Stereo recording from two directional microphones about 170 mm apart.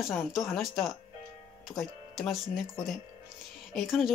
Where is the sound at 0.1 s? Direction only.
Centre (ahead or behind).